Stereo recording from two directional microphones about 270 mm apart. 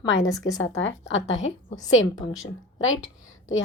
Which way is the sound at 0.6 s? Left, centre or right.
Left.